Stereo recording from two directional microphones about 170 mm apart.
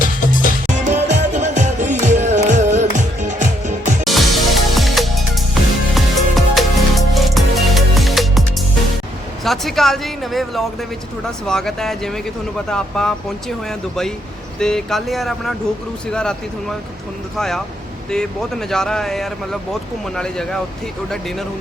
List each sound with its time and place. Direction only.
0.0 s music: 50° left (ahead or behind)
0.9 s music: 45° right (ahead or behind)
4.0 s music: centre (ahead or behind)
9.4 s speech: centre (ahead or behind)